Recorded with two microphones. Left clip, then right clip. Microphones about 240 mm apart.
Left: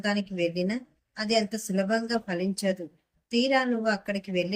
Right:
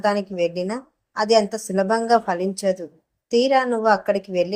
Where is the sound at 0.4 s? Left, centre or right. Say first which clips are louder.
Right 5 dB; centre.